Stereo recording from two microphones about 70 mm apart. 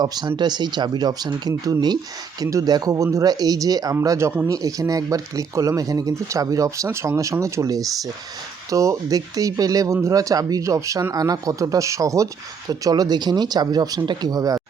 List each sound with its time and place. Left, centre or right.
0.0 s speech: right
2.4 s speech: right
2.6 s speech: right
2.9 s speech: right
3.2 s speech: right
6.8 s speech: right
12.8 s speech: right